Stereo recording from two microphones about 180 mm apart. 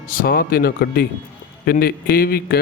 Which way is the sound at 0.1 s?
55° left (ahead or behind).